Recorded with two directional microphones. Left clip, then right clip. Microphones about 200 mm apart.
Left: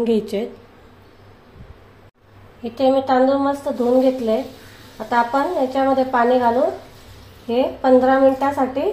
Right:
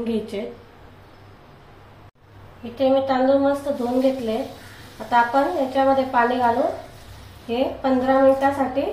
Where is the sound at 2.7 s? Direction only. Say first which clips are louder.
Left 3 dB; 45° left (ahead or behind).